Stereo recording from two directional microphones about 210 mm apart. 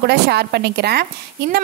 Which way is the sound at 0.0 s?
50° right (ahead or behind).